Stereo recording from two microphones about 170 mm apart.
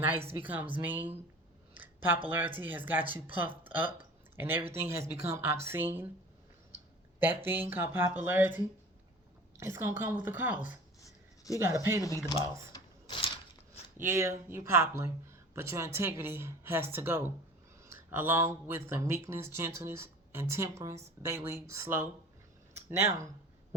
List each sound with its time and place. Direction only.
0.0 s speech: 10° right (ahead or behind)
1.7 s a sound: 10° right (ahead or behind)
2.3 s speech: 10° right (ahead or behind)
3.0 s speech: 30° right (ahead or behind)
3.4 s speech: 10° right (ahead or behind)
7.2 s speech: 10° right (ahead or behind)
12.0 s speech: 15° left (ahead or behind)
13.9 s speech: 15° right (ahead or behind)
22.7 s a sound: 15° right (ahead or behind)